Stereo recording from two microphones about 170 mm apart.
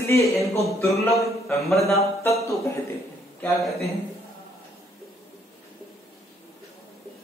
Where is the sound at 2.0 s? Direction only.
20° left (ahead or behind).